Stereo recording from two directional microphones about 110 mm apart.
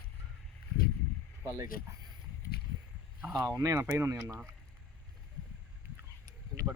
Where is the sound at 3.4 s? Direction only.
35° right (ahead or behind).